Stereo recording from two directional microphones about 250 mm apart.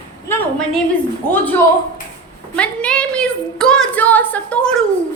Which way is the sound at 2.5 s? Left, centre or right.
Centre.